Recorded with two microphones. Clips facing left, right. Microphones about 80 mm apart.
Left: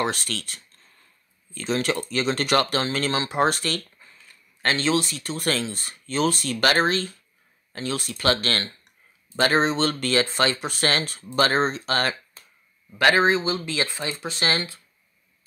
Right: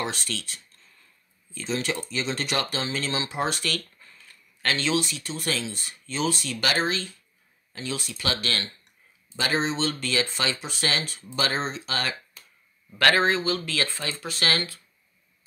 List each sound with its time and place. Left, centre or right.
0.0 s speech: left
12.9 s speech: centre